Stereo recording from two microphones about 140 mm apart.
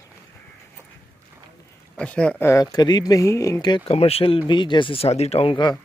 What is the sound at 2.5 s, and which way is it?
Speech, 25° left (ahead or behind).